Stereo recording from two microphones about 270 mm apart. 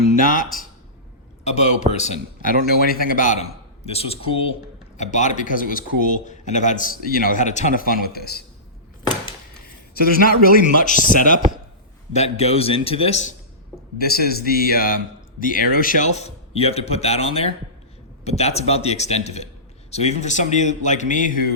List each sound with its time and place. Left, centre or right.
1.5 s a man's voice: left
9.9 s a man's voice: left
14.0 s a man's voice: left